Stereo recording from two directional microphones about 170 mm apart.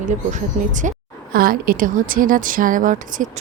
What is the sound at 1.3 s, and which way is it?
Speech, 55° right (ahead or behind).